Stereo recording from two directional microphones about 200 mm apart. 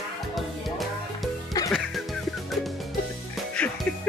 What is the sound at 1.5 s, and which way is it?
Music, 20° left (ahead or behind).